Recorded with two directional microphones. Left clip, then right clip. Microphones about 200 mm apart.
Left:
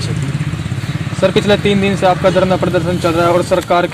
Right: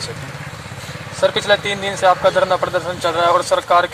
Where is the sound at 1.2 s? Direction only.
25° left (ahead or behind).